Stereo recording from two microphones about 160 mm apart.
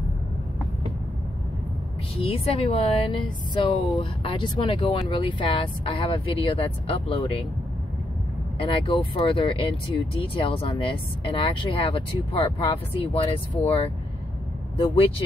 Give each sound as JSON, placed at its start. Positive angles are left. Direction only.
{"t": 2.1, "sound": "speech", "side_deg": 35}
{"t": 8.5, "sound": "speech", "side_deg": 35}